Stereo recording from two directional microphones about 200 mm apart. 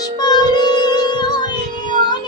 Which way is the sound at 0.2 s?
20° left (ahead or behind).